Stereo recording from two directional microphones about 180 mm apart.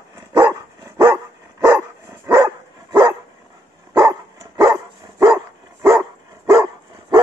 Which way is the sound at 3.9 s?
15° right (ahead or behind).